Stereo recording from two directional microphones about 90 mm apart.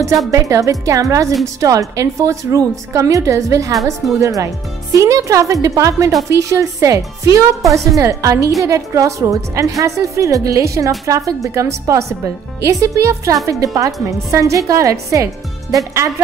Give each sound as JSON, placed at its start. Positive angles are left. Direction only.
{"t": 0.3, "sound": "speech", "side_deg": -40}